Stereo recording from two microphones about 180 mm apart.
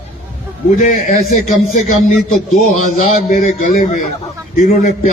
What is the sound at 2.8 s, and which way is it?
Speech, 45° left (ahead or behind).